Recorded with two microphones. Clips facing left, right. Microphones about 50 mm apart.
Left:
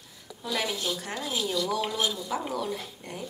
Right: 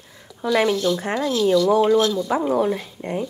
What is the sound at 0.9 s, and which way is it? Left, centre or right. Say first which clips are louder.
Speech: right 11 dB; centre.